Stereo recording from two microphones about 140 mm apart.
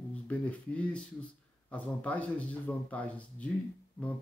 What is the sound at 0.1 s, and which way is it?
Speech, 10° left (ahead or behind).